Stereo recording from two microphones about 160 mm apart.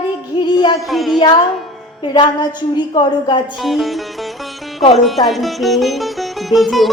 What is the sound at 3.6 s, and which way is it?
Sitar, centre (ahead or behind).